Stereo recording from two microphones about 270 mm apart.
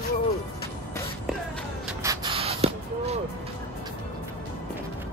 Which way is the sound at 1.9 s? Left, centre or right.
Centre.